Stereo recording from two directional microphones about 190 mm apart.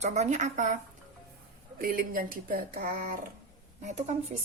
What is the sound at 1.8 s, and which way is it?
A woman's voice, 50° right (ahead or behind).